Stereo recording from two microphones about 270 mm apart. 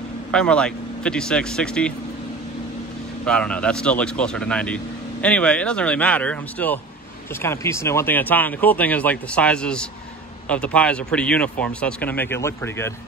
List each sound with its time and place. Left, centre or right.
0.3 s speech: centre
3.3 s speech: centre